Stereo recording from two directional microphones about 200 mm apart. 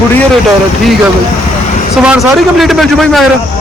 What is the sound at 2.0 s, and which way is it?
A man's voice, centre (ahead or behind).